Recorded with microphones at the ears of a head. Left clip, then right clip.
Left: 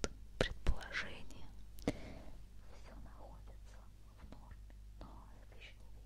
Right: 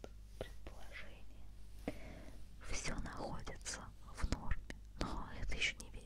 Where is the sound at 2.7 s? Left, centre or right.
Right.